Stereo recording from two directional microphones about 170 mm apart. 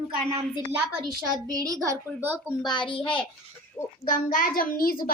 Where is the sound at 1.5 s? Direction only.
20° right (ahead or behind).